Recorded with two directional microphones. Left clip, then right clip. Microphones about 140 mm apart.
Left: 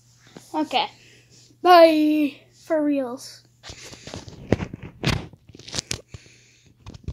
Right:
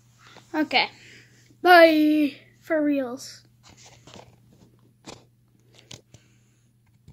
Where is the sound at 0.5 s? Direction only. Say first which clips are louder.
Right 1 dB; 25° right (ahead or behind).